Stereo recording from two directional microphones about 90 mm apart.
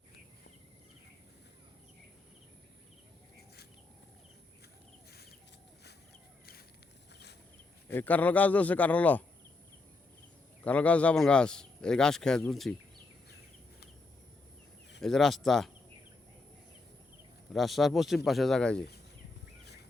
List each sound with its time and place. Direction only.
7.9 s speech: 20° left (ahead or behind)
10.6 s speech: 15° left (ahead or behind)
15.0 s speech: 5° left (ahead or behind)
17.5 s speech: centre (ahead or behind)